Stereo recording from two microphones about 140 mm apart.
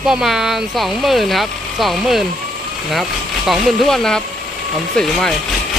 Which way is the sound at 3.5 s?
Centre (ahead or behind).